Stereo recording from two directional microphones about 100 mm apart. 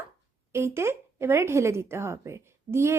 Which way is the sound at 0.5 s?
25° right (ahead or behind).